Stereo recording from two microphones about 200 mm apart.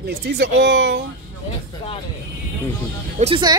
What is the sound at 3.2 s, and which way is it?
Speech, 25° right (ahead or behind).